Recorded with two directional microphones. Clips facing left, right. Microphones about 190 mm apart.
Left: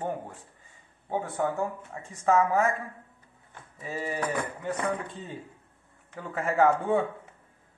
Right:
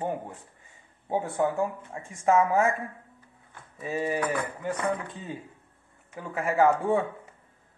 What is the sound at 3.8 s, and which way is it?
Speech, 15° right (ahead or behind).